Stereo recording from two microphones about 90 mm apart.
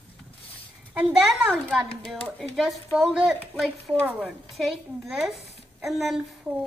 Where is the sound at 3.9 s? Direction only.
10° left (ahead or behind).